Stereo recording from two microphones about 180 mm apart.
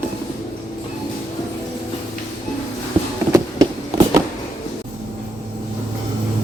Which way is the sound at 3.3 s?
20° right (ahead or behind).